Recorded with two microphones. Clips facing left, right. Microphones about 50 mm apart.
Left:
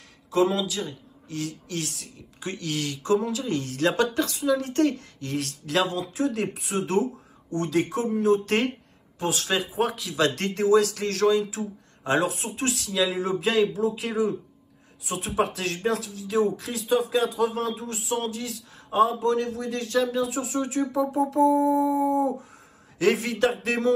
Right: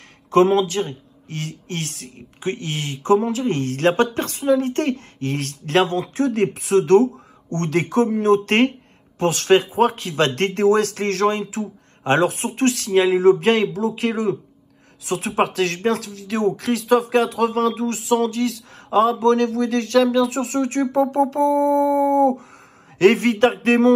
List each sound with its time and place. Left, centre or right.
0.3 s speech: right
6.6 s speech: right